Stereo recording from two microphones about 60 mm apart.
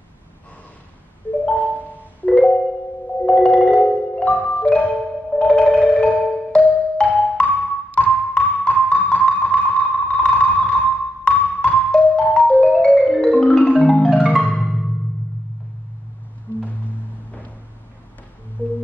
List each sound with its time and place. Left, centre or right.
1.4 s marimba: left
2.3 s marimba: centre
3.3 s music: centre
4.6 s marimba: left
5.3 s music: centre
18.6 s music: left